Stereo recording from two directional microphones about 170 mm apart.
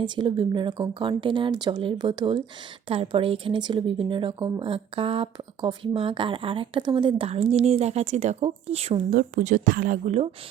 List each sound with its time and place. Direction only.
0.0 s speech: 30° right (ahead or behind)
9.1 s speech: 50° right (ahead or behind)